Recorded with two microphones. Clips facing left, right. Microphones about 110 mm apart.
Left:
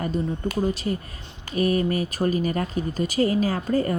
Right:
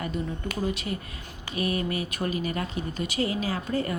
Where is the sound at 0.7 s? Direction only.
35° left (ahead or behind).